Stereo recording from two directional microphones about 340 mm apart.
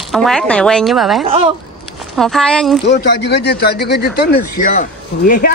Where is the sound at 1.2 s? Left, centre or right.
Centre.